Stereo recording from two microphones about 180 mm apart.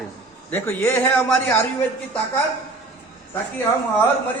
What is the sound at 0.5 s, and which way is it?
A man's voice, 10° left (ahead or behind).